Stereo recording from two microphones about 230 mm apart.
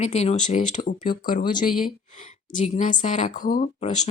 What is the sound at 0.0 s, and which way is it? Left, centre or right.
Speech, left.